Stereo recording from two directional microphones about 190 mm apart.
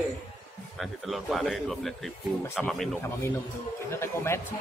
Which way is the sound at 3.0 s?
15° left (ahead or behind).